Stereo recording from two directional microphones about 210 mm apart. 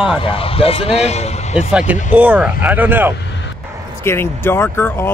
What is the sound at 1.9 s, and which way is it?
Speech, 10° right (ahead or behind).